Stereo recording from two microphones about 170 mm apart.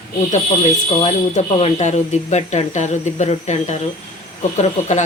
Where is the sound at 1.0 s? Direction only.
40° left (ahead or behind).